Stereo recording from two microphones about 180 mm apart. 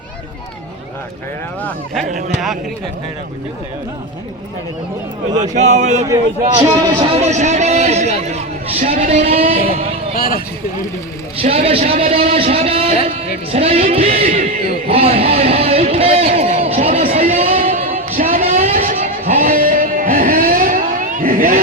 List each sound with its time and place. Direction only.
5.3 s a man's voice: 40° right (ahead or behind)
6.6 s speech: 20° right (ahead or behind)
7.2 s a man's voice: 40° right (ahead or behind)
10.2 s speech: 55° left (ahead or behind)
11.3 s a man's voice: 30° right (ahead or behind)
14.8 s a sound: 30° right (ahead or behind)
17.4 s music: 50° right (ahead or behind)
18.5 s vehicle: 50° right (ahead or behind)
19.4 s a sound: 50° right (ahead or behind)